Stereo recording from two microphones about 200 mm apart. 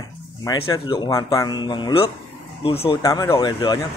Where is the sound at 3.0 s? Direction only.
15° left (ahead or behind).